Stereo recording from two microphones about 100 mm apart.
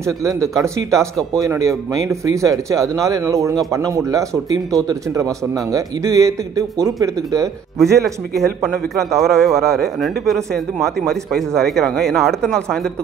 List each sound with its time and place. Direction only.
0.0 s speech: 30° right (ahead or behind)
8.4 s a man's voice: centre (ahead or behind)